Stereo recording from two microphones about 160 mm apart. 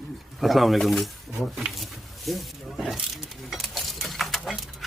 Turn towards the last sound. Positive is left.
turn(degrees=0)  # may be behind; listen again after turning